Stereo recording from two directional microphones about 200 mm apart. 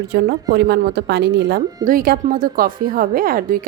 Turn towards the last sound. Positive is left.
turn(degrees=-45)  # may be behind; listen again after turning